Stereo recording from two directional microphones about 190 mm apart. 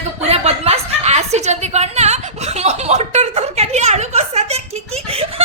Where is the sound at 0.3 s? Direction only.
30° right (ahead or behind).